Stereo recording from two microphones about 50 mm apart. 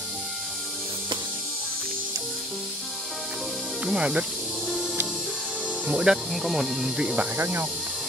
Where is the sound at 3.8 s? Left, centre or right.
Centre.